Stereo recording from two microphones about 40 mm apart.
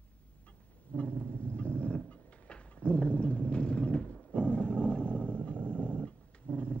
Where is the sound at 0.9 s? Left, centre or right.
Left.